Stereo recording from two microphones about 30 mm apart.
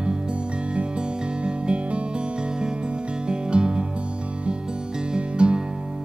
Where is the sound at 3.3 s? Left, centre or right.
Right.